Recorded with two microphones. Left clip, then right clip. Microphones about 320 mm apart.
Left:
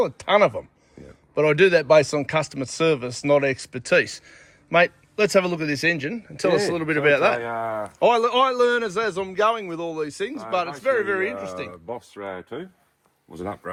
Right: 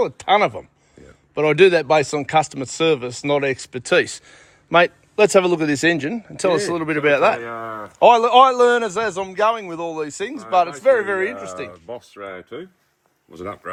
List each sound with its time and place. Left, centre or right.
0.0 s speech: centre
7.4 s speech: left
7.9 s speech: centre
12.1 s speech: centre